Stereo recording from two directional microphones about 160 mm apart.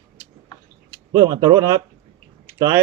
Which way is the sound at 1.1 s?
25° right (ahead or behind).